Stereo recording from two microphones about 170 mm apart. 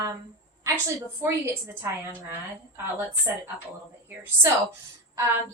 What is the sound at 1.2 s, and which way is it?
Speech, 15° right (ahead or behind).